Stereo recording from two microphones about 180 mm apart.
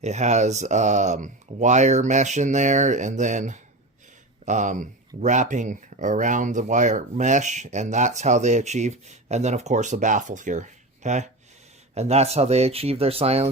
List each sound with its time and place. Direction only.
0.0 s speech: 40° right (ahead or behind)